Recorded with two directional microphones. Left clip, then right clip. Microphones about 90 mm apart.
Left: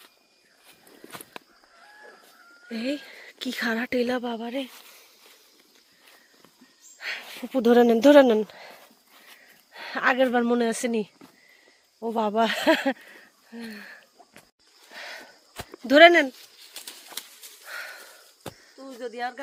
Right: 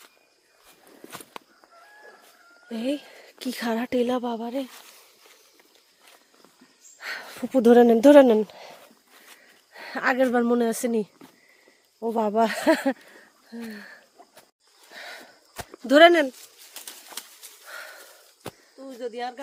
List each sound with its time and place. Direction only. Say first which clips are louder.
1.1 s walk: right 1 dB; 10° right (ahead or behind)
2.6 s speech: right 2 dB; 30° right (ahead or behind)
7.1 s a sound: right 3 dB; 70° right (ahead or behind)
7.7 s speech: right 2 dB; 35° right (ahead or behind)
9.7 s speech: left 1 dB; 15° right (ahead or behind)
12.3 s speech: even; 25° right (ahead or behind)
13.5 s speech: right 1 dB; 45° right (ahead or behind)
14.9 s a sound: left 1 dB; 20° right (ahead or behind)
15.9 s speech: left 1 dB; 30° right (ahead or behind)
17.7 s a sound: left 3 dB; 20° right (ahead or behind)
18.5 s a sound: right 1 dB; 35° right (ahead or behind)
18.8 s speech: even; 45° right (ahead or behind)